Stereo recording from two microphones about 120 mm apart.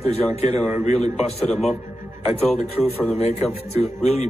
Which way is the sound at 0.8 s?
70° left (ahead or behind).